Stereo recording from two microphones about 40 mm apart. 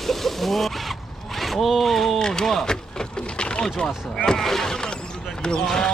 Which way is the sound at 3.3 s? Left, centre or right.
Left.